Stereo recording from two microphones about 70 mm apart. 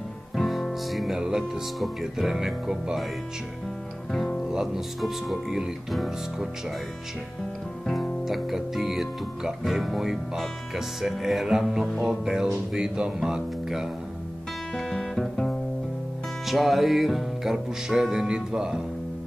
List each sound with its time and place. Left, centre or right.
0.4 s speech: centre
4.1 s music: centre
7.8 s speech: centre
11.0 s music: centre
12.7 s speech: centre
14.8 s guitar: centre
16.4 s music: centre